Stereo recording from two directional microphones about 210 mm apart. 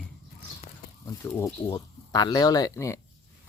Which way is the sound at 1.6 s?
15° left (ahead or behind).